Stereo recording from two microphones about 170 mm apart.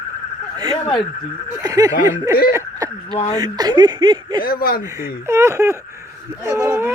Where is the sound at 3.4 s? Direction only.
25° right (ahead or behind).